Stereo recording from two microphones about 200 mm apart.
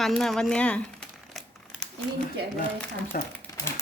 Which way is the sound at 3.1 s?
45° left (ahead or behind).